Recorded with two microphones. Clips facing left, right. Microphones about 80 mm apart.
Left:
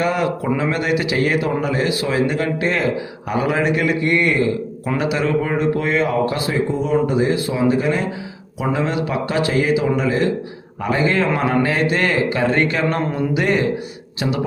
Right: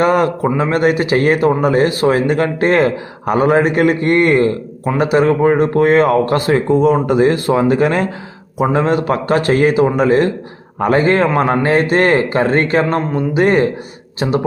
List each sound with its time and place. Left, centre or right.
0.0 s speech: right
8.7 s speech: right